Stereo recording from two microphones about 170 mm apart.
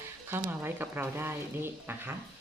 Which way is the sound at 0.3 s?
15° right (ahead or behind).